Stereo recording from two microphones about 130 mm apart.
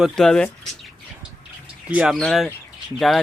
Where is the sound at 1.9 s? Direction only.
10° right (ahead or behind).